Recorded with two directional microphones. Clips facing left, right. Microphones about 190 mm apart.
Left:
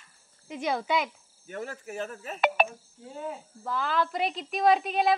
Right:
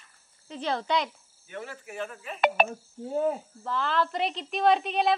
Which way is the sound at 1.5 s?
40° left (ahead or behind).